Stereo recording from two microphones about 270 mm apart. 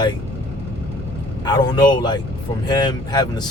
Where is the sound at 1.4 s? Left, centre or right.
Centre.